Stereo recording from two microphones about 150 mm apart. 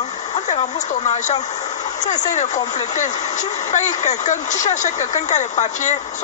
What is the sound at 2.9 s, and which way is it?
Speech, 55° left (ahead or behind).